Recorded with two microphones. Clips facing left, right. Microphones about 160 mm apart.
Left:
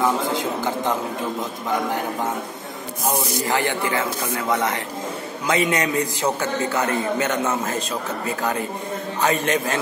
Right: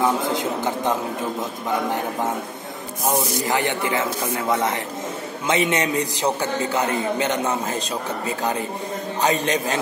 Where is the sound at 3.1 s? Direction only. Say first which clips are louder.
Right 1 dB; 20° right (ahead or behind).